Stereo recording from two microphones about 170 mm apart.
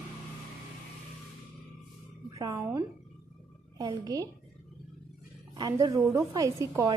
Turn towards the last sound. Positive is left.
turn(degrees=-20)  # may be behind; listen again after turning